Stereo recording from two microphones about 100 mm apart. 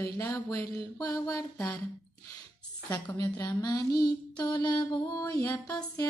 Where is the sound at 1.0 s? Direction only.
35° left (ahead or behind).